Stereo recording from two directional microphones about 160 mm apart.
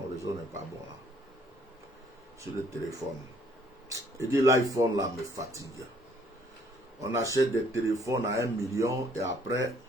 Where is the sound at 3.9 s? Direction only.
20° right (ahead or behind).